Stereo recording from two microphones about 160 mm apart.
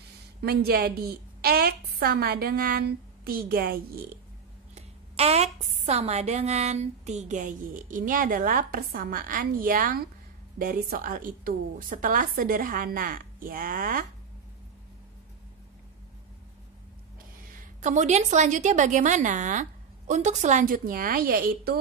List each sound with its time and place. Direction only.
0.4 s a woman's voice: 80° right
4.7 s a woman's voice: 40° right (ahead or behind); by 14.0 s 60° right (ahead or behind)
17.5 s a woman's voice: 50° right (ahead or behind); by 21.7 s 65° right (ahead or behind)